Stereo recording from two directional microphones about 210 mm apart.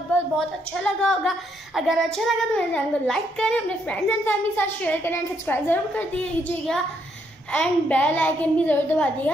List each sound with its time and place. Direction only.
0.7 s child singing: 5° left (ahead or behind)
7.5 s a woman's voice: 5° left (ahead or behind)